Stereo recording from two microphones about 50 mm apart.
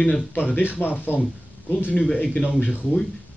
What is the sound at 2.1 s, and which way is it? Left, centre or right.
Speech, left.